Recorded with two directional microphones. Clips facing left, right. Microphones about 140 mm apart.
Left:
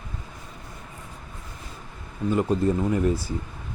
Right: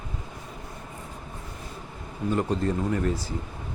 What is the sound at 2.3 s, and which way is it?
Speech, 10° left (ahead or behind).